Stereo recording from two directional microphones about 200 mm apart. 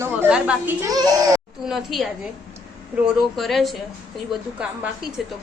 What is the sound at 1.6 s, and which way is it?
Speech, centre (ahead or behind).